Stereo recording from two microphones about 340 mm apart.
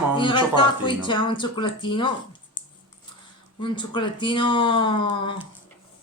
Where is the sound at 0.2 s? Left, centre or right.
Centre.